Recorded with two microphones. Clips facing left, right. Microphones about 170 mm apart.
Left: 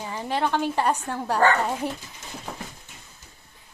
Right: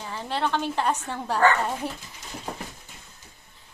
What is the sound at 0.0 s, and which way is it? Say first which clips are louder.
A woman's voice: left 2 dB; 15° left (ahead or behind).